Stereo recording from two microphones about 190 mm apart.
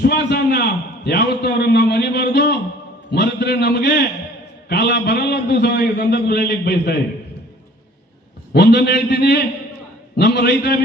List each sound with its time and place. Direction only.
0.0 s a man's voice: 60° left (ahead or behind)
3.1 s a sound: 60° left (ahead or behind)
4.7 s a man's voice: 60° left (ahead or behind)
8.5 s a man's voice: 60° left (ahead or behind)